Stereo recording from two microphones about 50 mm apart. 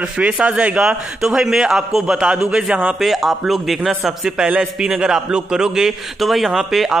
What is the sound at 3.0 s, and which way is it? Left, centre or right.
A man's voice, centre.